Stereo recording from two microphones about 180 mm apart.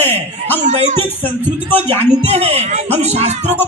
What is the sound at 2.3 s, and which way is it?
Speech, 35° right (ahead or behind).